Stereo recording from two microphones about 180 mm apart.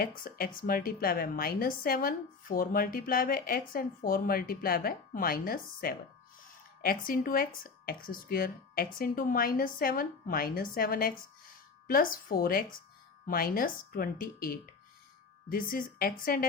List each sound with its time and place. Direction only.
0.0 s a woman's voice: 55° left (ahead or behind)
7.1 s a woman's voice: 50° left (ahead or behind)